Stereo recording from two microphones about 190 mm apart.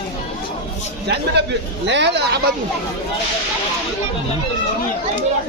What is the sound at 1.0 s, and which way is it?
A man's voice, 60° right (ahead or behind).